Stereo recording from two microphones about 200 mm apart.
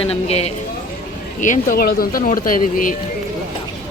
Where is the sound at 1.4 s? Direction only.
40° left (ahead or behind).